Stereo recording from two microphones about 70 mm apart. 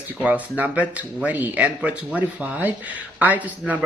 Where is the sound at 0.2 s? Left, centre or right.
Right.